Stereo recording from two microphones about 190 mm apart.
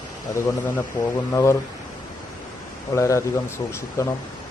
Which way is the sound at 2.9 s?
15° left (ahead or behind).